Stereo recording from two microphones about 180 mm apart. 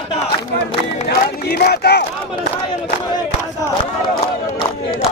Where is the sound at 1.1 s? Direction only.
60° left (ahead or behind).